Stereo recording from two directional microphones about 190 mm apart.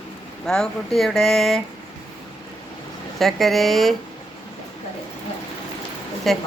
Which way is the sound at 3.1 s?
Centre (ahead or behind).